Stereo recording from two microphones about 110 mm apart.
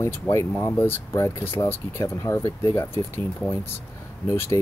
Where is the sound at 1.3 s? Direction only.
55° left (ahead or behind).